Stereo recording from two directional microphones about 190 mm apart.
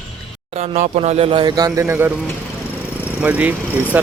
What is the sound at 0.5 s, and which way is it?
Speech, 35° right (ahead or behind).